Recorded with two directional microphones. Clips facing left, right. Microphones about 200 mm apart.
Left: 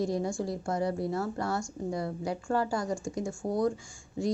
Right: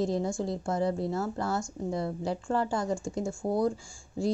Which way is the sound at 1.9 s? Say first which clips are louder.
Right 2 dB; 25° right (ahead or behind).